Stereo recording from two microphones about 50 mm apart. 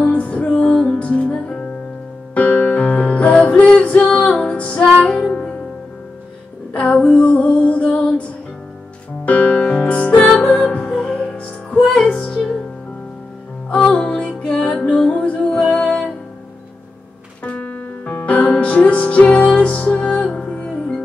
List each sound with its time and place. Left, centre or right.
0.0 s music: left
6.7 s music: left
13.7 s music: centre
17.4 s music: left